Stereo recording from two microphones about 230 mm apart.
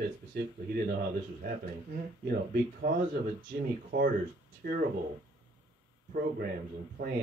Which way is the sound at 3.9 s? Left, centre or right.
Right.